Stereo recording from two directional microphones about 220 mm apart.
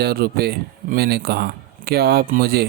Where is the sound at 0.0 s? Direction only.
45° right (ahead or behind).